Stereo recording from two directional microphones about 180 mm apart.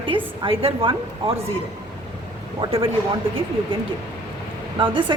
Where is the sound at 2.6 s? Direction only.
30° right (ahead or behind).